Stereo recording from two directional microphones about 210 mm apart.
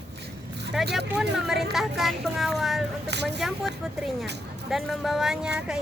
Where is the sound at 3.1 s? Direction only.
55° right (ahead or behind).